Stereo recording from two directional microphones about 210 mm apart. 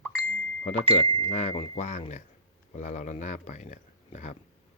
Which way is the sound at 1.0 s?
20° left (ahead or behind).